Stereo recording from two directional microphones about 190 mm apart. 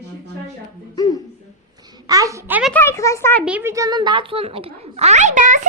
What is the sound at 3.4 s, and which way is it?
A child's voice, 10° right (ahead or behind).